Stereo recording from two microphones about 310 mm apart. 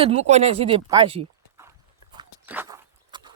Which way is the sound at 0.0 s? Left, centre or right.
Right.